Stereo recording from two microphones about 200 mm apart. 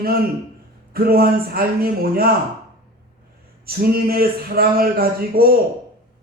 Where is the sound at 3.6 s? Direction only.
50° right (ahead or behind).